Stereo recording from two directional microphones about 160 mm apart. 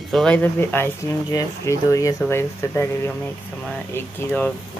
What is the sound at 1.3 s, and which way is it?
Speech, 20° left (ahead or behind).